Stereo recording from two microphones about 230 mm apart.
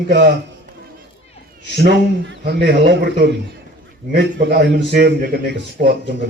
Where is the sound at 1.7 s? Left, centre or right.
Right.